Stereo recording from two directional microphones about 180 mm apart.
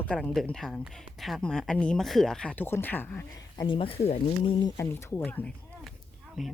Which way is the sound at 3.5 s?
30° left (ahead or behind).